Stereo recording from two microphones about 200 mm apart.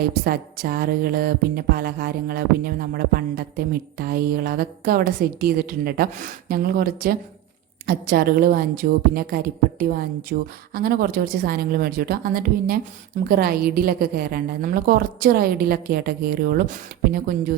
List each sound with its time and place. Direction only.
0.3 s a woman's voice: 50° right (ahead or behind)